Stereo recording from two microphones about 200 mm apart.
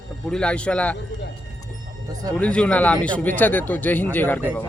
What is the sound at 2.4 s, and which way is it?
Speech, 5° left (ahead or behind).